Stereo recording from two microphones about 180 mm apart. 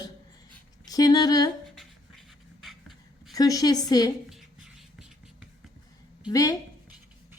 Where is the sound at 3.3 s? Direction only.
20° left (ahead or behind).